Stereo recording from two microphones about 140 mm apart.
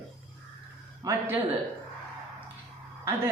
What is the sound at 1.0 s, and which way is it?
Speech, 15° right (ahead or behind).